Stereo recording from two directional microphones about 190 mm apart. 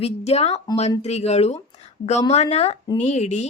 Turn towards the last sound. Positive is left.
turn(degrees=35)  # may be behind; listen again after turning